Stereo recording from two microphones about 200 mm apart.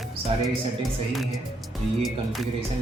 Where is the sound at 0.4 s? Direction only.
Centre (ahead or behind).